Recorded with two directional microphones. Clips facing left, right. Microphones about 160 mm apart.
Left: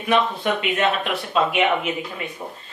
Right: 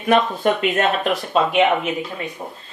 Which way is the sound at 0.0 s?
45° right (ahead or behind).